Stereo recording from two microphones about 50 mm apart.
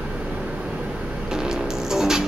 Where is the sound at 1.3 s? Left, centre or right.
Centre.